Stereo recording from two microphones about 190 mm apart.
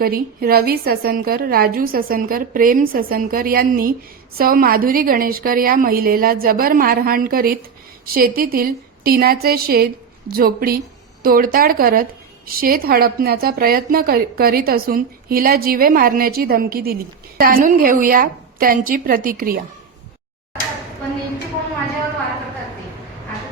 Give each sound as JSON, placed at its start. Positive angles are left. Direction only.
{"t": 0.0, "sound": "a woman's voice", "side_deg": -55}